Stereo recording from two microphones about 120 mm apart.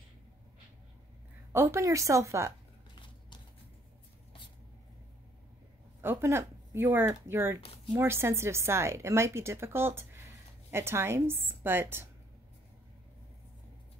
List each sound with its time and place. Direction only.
1.5 s speech: 25° right (ahead or behind)
5.9 s speech: 20° right (ahead or behind)
7.6 s speech: 55° left (ahead or behind)
7.9 s speech: 20° right (ahead or behind)